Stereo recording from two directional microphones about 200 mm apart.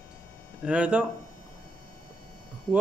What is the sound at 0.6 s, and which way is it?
Speech, 5° right (ahead or behind).